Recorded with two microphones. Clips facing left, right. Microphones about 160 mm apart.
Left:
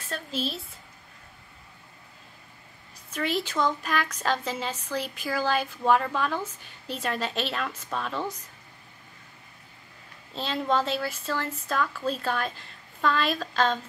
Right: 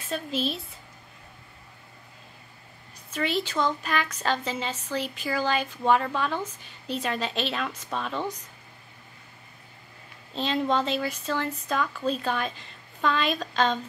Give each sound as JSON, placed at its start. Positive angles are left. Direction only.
{"t": 0.1, "sound": "a woman's voice", "side_deg": 0}
{"t": 3.3, "sound": "a woman's voice", "side_deg": 10}
{"t": 10.3, "sound": "a woman's voice", "side_deg": 5}